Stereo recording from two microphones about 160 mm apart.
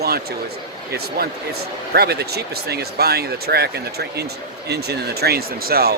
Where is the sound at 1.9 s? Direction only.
85° right.